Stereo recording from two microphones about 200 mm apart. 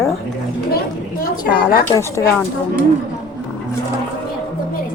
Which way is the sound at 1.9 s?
15° left (ahead or behind).